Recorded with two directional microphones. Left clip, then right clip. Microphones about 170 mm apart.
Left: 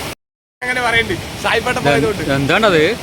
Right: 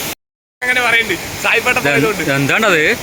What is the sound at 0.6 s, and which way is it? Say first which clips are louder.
Speech: right 3 dB; 20° left (ahead or behind).